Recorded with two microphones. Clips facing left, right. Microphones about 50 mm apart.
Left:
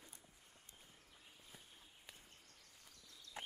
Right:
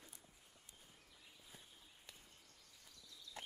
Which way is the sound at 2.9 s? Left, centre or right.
Left.